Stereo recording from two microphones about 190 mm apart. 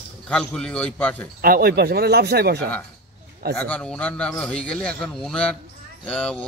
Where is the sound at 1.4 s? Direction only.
55° right (ahead or behind).